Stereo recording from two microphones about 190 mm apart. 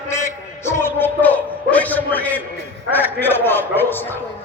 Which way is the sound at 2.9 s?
10° left (ahead or behind).